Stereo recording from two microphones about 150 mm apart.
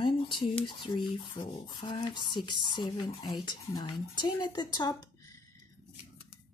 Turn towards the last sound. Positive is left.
turn(degrees=30)  # may be behind; listen again after turning